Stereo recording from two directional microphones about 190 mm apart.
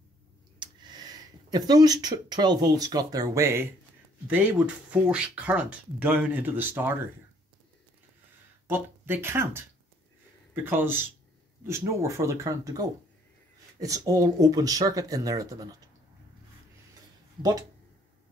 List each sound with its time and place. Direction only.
0.6 s speech: 20° right (ahead or behind)
8.6 s speech: 10° right (ahead or behind)
17.4 s speech: 20° right (ahead or behind)